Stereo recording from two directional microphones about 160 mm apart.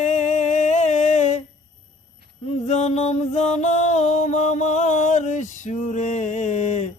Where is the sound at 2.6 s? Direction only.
45° left (ahead or behind).